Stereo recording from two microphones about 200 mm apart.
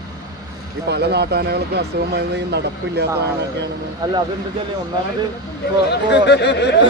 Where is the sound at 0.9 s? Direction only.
55° right (ahead or behind).